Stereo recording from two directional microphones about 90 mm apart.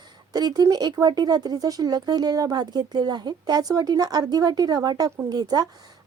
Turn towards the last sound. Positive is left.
turn(degrees=-50)  # may be behind; listen again after turning